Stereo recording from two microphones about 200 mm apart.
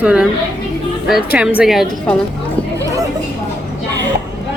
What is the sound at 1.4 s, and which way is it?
Speech, 5° right (ahead or behind).